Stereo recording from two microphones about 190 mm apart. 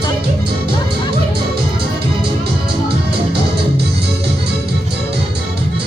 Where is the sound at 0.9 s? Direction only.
55° right (ahead or behind).